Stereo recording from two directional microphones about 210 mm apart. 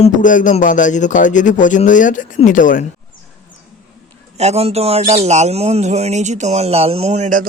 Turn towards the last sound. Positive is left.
turn(degrees=-35)  # may be behind; listen again after turning